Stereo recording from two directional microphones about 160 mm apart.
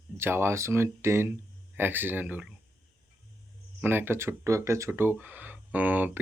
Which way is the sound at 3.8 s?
15° right (ahead or behind).